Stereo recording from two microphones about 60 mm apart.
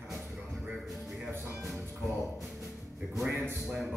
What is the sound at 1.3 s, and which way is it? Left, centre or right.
Speech, right.